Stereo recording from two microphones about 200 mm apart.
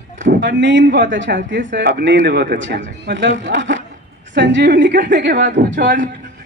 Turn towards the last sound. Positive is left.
turn(degrees=-40)  # may be behind; listen again after turning